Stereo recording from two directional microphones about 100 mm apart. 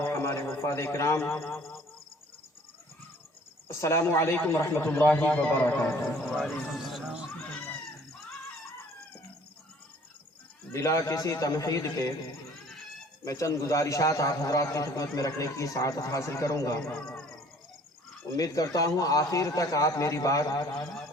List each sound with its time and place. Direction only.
0.0 s a man's voice: 25° left (ahead or behind)
3.7 s a man's voice: 30° left (ahead or behind)
5.9 s speech: centre (ahead or behind)
10.7 s a man's voice: 30° left (ahead or behind)
18.3 s a man's voice: 35° left (ahead or behind)